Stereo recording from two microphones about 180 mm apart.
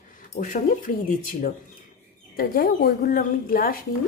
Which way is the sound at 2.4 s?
55° left (ahead or behind).